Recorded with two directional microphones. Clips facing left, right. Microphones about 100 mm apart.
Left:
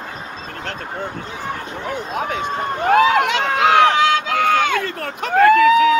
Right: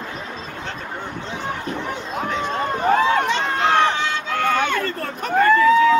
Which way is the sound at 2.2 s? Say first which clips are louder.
Right 1 dB; 60° left (ahead or behind).